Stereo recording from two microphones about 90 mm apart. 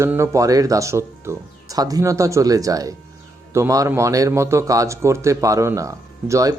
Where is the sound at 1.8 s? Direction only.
40° right (ahead or behind).